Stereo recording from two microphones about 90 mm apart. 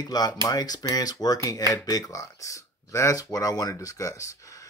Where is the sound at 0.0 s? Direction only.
45° left (ahead or behind).